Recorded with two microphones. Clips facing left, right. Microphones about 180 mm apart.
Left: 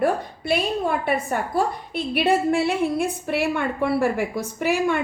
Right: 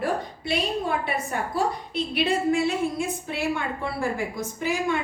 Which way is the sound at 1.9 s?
60° left (ahead or behind).